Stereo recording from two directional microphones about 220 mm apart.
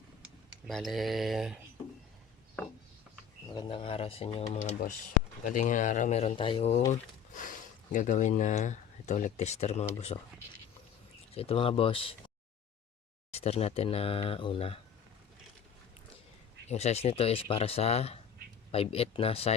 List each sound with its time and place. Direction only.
0.7 s speech: centre (ahead or behind)
3.5 s speech: 20° left (ahead or behind)
11.3 s speech: 25° left (ahead or behind)
13.3 s speech: 30° left (ahead or behind)
16.6 s speech: 30° left (ahead or behind)